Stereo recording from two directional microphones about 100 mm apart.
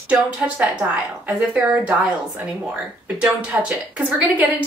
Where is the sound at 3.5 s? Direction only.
20° right (ahead or behind).